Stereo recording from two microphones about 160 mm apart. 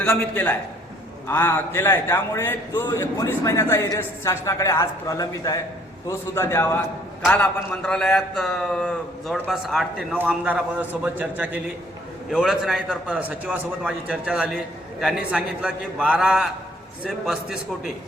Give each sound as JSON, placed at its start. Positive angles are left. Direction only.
{"t": 0.0, "sound": "a man's voice", "side_deg": 5}